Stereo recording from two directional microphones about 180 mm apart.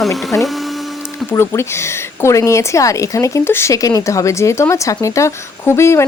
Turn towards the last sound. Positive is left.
turn(degrees=15)  # may be behind; listen again after turning